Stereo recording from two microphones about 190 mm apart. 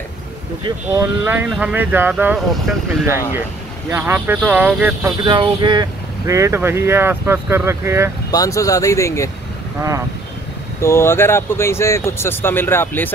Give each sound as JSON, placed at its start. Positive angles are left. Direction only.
{"t": 0.7, "sound": "speech", "side_deg": -15}
{"t": 5.2, "sound": "speech", "side_deg": -25}
{"t": 8.3, "sound": "speech", "side_deg": 20}
{"t": 9.8, "sound": "speech", "side_deg": -15}
{"t": 10.8, "sound": "speech", "side_deg": 15}